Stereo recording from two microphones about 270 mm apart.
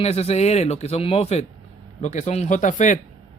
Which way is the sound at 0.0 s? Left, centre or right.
Left.